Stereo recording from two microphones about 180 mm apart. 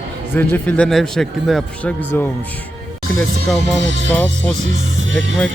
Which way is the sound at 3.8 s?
90° right.